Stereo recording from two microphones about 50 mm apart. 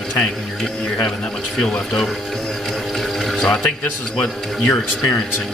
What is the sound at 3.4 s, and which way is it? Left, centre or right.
Speech, centre.